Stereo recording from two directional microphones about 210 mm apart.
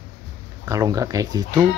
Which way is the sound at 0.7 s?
15° right (ahead or behind).